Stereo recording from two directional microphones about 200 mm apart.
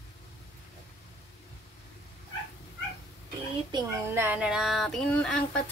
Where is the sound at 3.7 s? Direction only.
15° right (ahead or behind).